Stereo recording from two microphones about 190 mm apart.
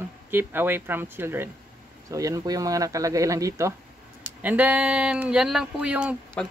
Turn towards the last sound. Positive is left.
turn(degrees=-5)  # may be behind; listen again after turning